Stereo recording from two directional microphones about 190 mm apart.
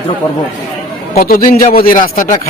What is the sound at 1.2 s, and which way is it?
A man's voice, 50° left (ahead or behind).